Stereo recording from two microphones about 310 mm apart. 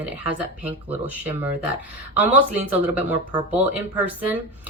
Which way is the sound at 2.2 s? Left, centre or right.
Centre.